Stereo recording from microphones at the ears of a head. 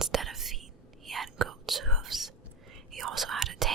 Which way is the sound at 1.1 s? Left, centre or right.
Right.